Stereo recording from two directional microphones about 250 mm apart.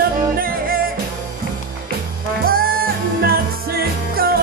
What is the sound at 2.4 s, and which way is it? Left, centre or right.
Music, right.